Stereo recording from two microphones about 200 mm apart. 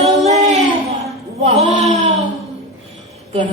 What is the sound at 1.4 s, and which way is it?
Speech, 35° right (ahead or behind).